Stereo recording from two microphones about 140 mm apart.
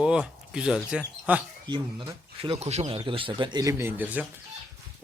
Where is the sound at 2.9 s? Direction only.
40° right (ahead or behind); by 4.2 s 10° right (ahead or behind).